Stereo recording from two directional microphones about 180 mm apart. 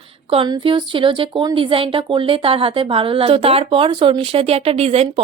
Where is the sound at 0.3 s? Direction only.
25° right (ahead or behind).